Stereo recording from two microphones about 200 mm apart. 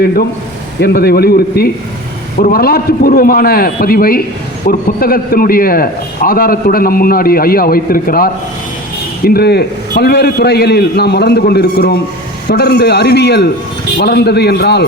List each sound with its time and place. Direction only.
0.8 s a man's voice: 50° left (ahead or behind)